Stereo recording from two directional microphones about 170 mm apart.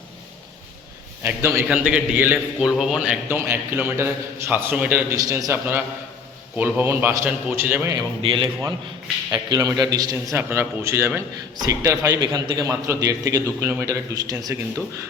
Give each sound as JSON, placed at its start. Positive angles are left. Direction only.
{"t": 1.2, "sound": "a man's voice", "side_deg": -10}
{"t": 5.1, "sound": "a man's voice", "side_deg": -20}
{"t": 7.9, "sound": "a man's voice", "side_deg": -30}
{"t": 9.3, "sound": "a man's voice", "side_deg": -20}